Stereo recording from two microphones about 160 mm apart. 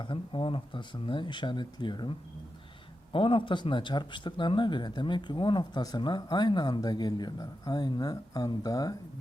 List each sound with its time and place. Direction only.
0.0 s speech: 30° left (ahead or behind)